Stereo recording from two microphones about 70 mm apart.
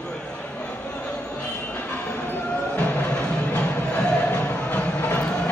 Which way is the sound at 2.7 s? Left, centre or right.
Centre.